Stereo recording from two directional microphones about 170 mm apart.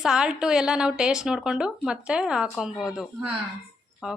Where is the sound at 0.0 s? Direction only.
5° right (ahead or behind).